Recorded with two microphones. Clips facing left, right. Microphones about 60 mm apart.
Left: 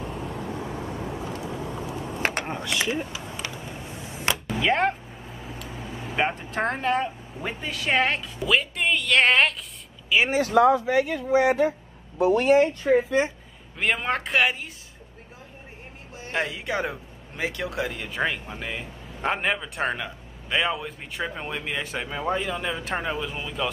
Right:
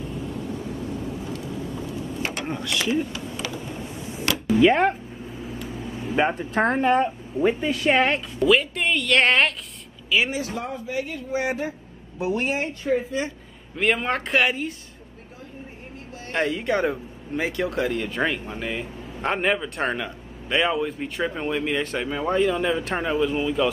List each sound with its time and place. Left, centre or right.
0.0 s vehicle: left
2.4 s vehicle: centre
4.6 s a woman's voice: centre
5.7 s vehicle: centre
6.5 s speech: right
6.8 s a woman's voice: centre
10.0 s speech: left
10.4 s speech: left
12.4 s speech: left
13.2 s speech: left
13.7 s speech: centre
16.3 s speech: centre